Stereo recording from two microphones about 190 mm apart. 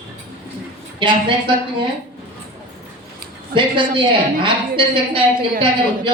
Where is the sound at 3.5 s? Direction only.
25° right (ahead or behind).